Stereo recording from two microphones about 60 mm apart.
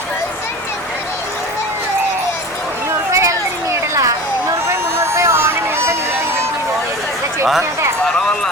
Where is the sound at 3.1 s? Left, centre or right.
Right.